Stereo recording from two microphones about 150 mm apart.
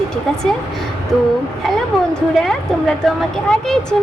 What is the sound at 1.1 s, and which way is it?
A woman's voice, centre (ahead or behind).